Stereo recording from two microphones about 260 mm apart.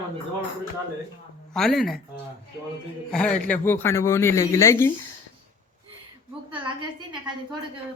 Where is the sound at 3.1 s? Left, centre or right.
Centre.